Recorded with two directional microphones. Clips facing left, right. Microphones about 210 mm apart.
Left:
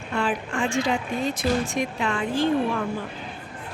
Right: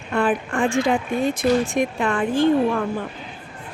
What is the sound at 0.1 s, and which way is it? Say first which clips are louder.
Speech: right 5 dB; 55° right (ahead or behind).